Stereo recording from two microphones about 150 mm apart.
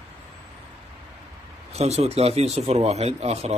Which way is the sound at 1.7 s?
45° right (ahead or behind).